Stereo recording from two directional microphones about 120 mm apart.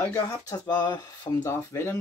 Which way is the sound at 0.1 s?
30° left (ahead or behind).